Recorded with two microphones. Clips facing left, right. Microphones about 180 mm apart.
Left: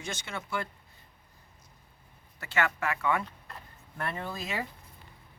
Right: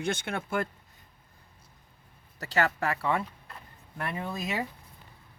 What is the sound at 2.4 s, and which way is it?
Speech, 40° right (ahead or behind).